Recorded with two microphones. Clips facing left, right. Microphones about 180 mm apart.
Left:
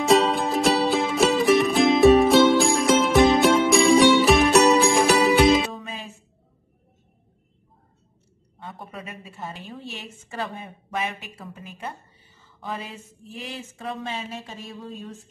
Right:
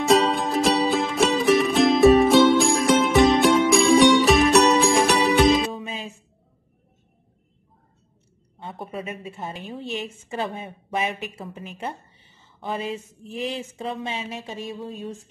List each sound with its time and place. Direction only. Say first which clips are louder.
0.0 s music: even; centre (ahead or behind)
8.5 s a woman's voice: right 5 dB; 25° right (ahead or behind)
13.3 s a woman's voice: right 7 dB; 20° right (ahead or behind)